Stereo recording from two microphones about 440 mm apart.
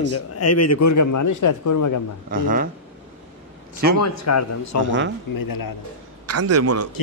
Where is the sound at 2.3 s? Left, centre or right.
Centre.